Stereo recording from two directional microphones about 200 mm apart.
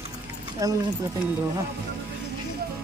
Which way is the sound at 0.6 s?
15° right (ahead or behind).